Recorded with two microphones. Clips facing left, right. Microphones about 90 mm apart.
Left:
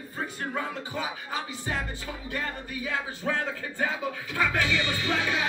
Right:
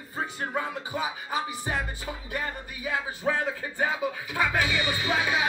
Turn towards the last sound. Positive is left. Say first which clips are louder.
# right 2 dB
turn(degrees=-15)  # may be behind; listen again after turning